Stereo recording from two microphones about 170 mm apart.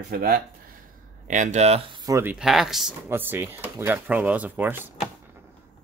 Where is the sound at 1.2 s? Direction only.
45° right (ahead or behind).